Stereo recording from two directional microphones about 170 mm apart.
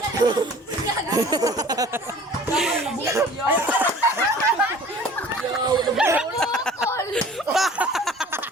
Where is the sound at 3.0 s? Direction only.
15° right (ahead or behind).